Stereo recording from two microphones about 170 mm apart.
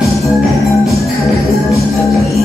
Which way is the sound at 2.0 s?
Centre (ahead or behind).